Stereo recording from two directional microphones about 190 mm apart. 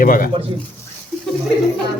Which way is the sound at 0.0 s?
50° left (ahead or behind).